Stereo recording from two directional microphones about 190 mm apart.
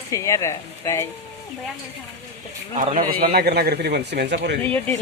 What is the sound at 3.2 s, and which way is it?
A man's voice, 55° right (ahead or behind).